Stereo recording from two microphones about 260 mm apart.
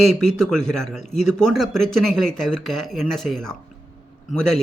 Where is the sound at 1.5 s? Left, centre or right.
Centre.